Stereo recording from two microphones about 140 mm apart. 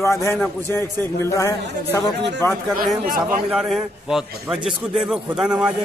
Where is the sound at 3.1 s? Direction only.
85° right.